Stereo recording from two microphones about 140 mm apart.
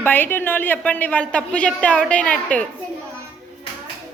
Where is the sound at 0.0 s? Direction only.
15° left (ahead or behind).